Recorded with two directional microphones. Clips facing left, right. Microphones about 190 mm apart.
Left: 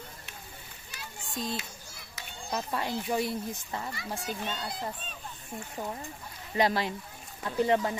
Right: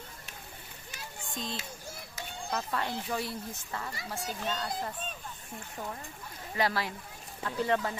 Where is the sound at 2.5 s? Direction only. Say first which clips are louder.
Left 2 dB; 15° left (ahead or behind).